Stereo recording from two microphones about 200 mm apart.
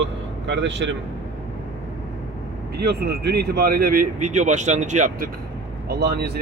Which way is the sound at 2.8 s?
55° right (ahead or behind).